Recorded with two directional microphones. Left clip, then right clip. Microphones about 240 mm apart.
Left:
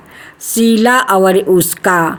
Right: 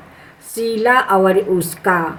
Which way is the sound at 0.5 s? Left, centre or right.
Left.